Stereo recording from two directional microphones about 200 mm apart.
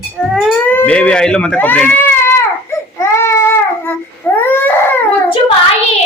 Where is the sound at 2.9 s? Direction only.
15° left (ahead or behind).